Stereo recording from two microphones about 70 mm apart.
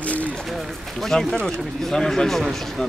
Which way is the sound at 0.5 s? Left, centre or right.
Centre.